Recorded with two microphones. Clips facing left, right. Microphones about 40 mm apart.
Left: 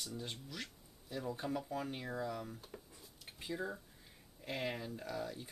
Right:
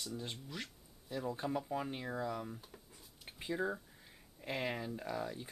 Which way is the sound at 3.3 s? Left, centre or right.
Centre.